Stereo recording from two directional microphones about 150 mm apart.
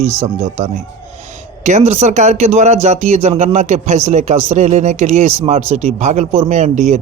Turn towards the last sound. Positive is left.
turn(degrees=-50)  # may be behind; listen again after turning